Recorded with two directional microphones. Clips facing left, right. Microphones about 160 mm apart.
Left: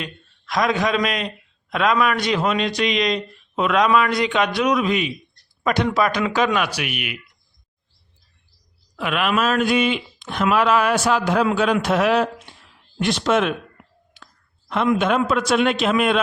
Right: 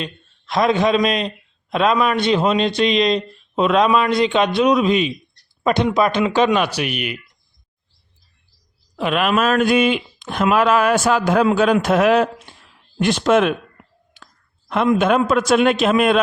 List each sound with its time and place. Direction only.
0.0 s a man's voice: 25° right (ahead or behind)
9.0 s speech: 35° right (ahead or behind); by 13.5 s 50° right (ahead or behind)
14.9 s speech: 45° right (ahead or behind)